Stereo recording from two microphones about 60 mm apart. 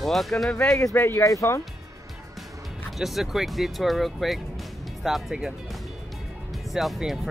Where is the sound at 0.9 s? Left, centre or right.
Left.